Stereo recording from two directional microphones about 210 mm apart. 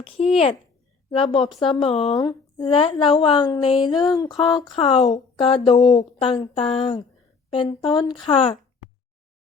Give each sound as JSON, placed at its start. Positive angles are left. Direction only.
{"t": 0.0, "sound": "a woman's voice", "side_deg": 30}
{"t": 2.1, "sound": "a woman's voice", "side_deg": 20}